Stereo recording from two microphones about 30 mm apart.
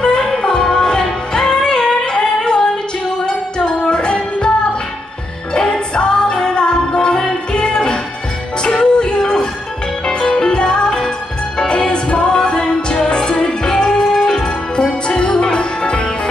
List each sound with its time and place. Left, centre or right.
0.0 s music: left
2.4 s female singing: left
3.5 s music: left
5.5 s music: left
10.4 s music: left
11.9 s music: left
14.1 s music: centre
14.8 s music: left